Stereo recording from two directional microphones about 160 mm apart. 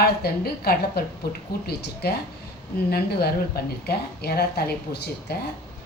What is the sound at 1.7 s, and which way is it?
A woman's voice, 90° left.